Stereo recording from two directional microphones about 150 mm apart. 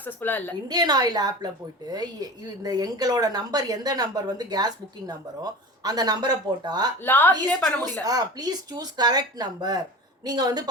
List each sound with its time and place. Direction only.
0.0 s a woman's voice: 10° left (ahead or behind)
0.7 s a woman's voice: 25° right (ahead or behind)
7.0 s a woman's voice: 10° left (ahead or behind)
8.0 s a woman's voice: 25° right (ahead or behind)